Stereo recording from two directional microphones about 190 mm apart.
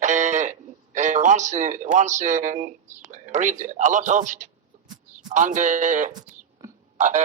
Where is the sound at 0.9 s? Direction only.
40° right (ahead or behind).